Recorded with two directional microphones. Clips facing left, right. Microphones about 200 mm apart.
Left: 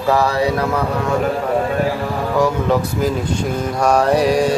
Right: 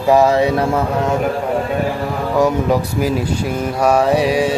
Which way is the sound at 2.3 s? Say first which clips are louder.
Right 2 dB; 15° right (ahead or behind).